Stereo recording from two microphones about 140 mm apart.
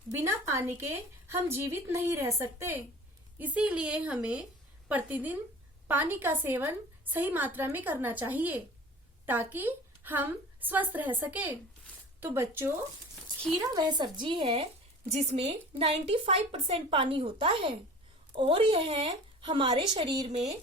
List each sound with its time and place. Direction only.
0.2 s a woman's voice: 20° right (ahead or behind); by 20.3 s 40° right (ahead or behind)